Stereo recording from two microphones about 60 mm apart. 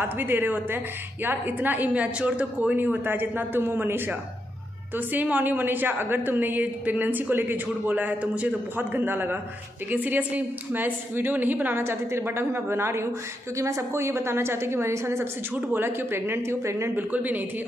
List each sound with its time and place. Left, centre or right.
0.0 s a woman's voice: right
2.8 s a woman's voice: right
11.8 s a woman's voice: right
13.6 s a woman's voice: right
15.5 s a woman's voice: right
16.9 s a woman's voice: right